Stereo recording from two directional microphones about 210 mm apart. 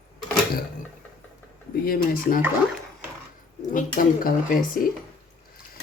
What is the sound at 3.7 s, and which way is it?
Speech, 40° left (ahead or behind).